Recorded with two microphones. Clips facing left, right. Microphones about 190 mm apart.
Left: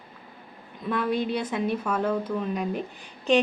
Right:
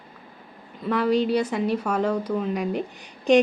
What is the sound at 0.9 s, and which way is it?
Speech, 80° right.